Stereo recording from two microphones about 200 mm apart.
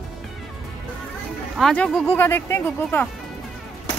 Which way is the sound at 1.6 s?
5° left (ahead or behind).